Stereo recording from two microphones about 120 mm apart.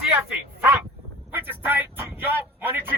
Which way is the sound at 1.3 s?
15° right (ahead or behind).